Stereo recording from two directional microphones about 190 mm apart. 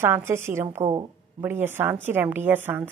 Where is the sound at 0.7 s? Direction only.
30° right (ahead or behind).